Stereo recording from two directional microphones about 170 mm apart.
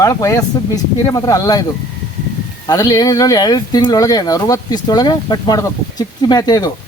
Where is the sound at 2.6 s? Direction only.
20° left (ahead or behind).